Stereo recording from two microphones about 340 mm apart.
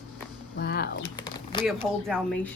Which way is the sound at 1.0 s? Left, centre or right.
Centre.